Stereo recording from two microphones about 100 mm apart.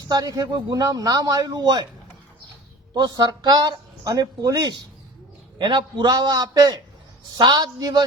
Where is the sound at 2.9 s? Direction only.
40° right (ahead or behind).